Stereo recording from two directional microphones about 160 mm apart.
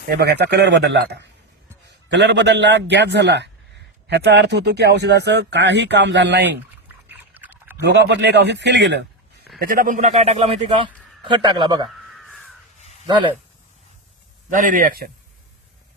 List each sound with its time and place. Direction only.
0.1 s speech: 90° right
7.1 s a sound: 10° right (ahead or behind)
7.9 s a man's voice: 90° right
9.6 s a man's voice: 60° right (ahead or behind); by 10.8 s 40° right (ahead or behind)
11.2 s a man's voice: 30° right (ahead or behind)
12.2 s crow: centre (ahead or behind)
14.5 s speech: 55° right (ahead or behind)